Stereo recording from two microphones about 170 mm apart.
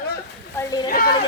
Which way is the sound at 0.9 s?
60° left (ahead or behind).